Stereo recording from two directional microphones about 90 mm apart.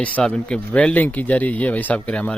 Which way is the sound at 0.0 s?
15° left (ahead or behind).